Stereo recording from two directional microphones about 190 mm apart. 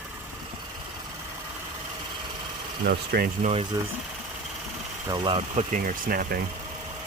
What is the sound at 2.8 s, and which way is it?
Speech, 55° right (ahead or behind).